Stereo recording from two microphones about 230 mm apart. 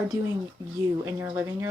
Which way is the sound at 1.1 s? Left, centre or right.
Centre.